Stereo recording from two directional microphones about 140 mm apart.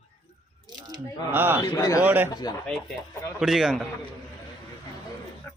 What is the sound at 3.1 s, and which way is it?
Speech, 20° left (ahead or behind).